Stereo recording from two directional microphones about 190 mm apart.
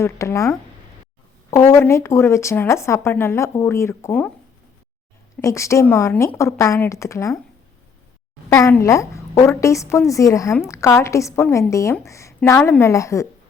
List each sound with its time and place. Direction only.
0.0 s a woman's voice: 15° left (ahead or behind)
1.7 s a woman's voice: 15° left (ahead or behind)
5.4 s a woman's voice: 15° left (ahead or behind)
8.4 s a woman's voice: 15° left (ahead or behind)